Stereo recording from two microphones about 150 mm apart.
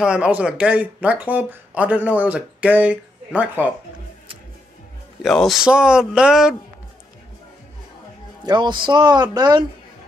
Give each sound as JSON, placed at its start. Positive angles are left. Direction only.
{"t": 0.0, "sound": "speech", "side_deg": -5}
{"t": 5.2, "sound": "speech", "side_deg": 0}
{"t": 8.5, "sound": "speech", "side_deg": -30}